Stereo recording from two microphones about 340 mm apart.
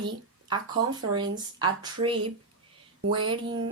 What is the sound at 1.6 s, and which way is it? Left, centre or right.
Speech, centre.